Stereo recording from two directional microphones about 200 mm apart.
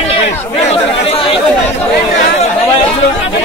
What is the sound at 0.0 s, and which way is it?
Chatter, 30° left (ahead or behind).